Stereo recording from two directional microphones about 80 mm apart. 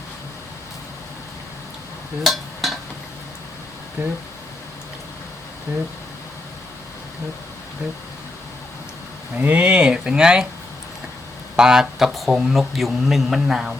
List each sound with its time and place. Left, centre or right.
2.2 s a sound: centre
4.0 s speech: right
9.4 s speech: centre
11.5 s speech: centre